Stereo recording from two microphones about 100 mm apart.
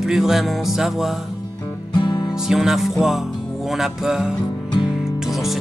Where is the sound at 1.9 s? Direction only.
50° left (ahead or behind).